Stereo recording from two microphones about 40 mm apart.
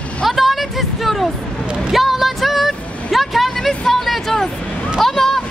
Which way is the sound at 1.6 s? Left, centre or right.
Right.